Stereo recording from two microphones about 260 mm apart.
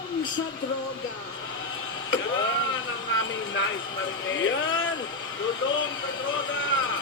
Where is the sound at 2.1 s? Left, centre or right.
Left.